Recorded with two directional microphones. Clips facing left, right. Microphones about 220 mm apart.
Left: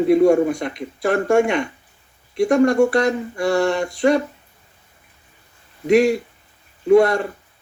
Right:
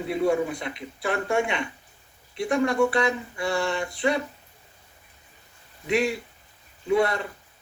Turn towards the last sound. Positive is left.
turn(degrees=45)  # may be behind; listen again after turning